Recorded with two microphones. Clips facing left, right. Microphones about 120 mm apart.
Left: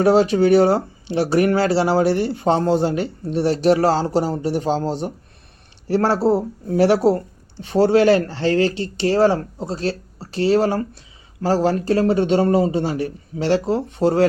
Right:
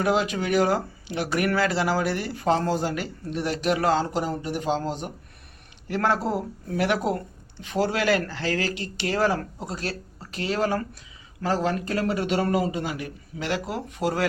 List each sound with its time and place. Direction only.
0.0 s speech: 35° left (ahead or behind)